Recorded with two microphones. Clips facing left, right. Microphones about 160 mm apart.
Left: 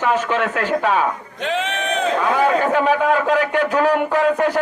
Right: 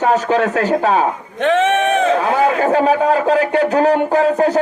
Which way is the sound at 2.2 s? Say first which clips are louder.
Right 2 dB; 35° right (ahead or behind).